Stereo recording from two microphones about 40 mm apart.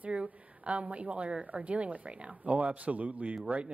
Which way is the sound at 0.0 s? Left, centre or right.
Right.